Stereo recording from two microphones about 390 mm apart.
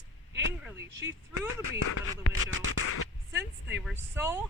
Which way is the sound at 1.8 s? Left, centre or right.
Left.